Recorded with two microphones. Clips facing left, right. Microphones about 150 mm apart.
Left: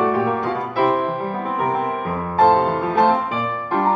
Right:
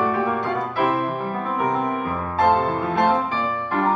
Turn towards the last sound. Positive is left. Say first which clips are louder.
# left 3 dB
turn(degrees=20)  # may be behind; listen again after turning